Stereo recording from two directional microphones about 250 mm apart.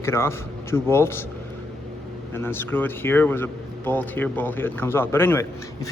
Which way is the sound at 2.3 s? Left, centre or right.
Centre.